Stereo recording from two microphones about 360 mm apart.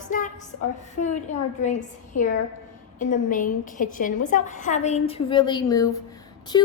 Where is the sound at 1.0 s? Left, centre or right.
Left.